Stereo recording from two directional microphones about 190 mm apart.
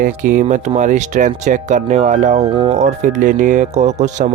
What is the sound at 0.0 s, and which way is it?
Speech, 45° right (ahead or behind).